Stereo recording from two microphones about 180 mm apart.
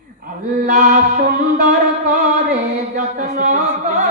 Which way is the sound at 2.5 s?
50° right (ahead or behind).